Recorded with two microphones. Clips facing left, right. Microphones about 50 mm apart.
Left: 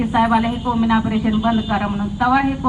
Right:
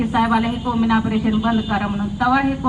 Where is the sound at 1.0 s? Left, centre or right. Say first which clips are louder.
Left 1 dB; centre.